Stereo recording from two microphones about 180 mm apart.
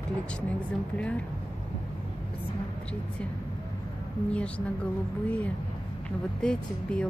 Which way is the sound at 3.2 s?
5° left (ahead or behind).